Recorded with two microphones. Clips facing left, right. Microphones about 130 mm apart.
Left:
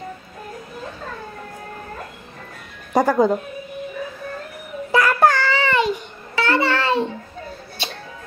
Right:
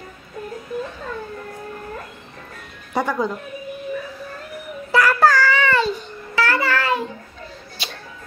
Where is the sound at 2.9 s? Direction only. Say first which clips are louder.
Left 6 dB; 40° left (ahead or behind).